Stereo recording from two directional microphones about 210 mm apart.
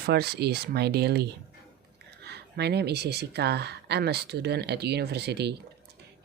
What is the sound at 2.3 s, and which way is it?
Speech, 50° right (ahead or behind).